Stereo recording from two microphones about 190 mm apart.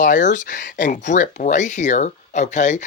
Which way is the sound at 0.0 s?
40° left (ahead or behind).